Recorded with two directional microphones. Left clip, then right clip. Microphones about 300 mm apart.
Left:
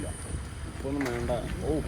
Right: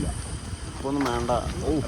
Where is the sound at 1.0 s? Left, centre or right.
Right.